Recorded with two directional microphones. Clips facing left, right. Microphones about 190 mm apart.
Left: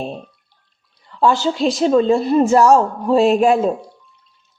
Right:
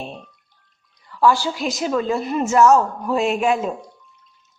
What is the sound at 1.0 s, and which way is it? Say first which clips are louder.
Speech: left 2 dB; 25° left (ahead or behind).